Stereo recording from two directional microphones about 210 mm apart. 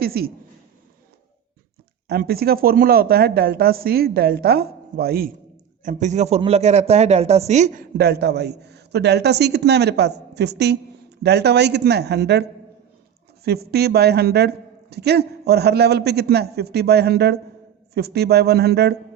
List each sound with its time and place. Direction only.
0.0 s speech: 45° right (ahead or behind)
2.0 s a man's voice: 50° right (ahead or behind)
5.8 s a man's voice: 35° right (ahead or behind)
7.9 s a man's voice: 50° right (ahead or behind)